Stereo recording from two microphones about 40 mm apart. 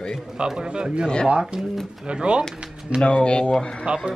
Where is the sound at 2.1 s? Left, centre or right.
Right.